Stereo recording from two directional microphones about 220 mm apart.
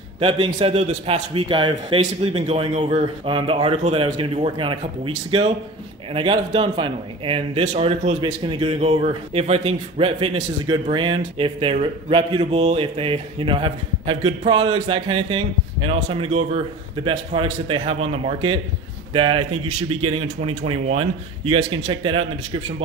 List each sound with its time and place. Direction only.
0.2 s a man's voice: 25° right (ahead or behind)